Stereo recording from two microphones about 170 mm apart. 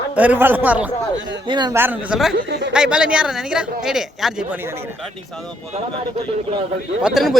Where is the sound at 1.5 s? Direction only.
25° right (ahead or behind).